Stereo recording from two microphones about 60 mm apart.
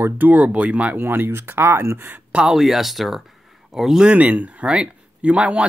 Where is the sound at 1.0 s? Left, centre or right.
Right.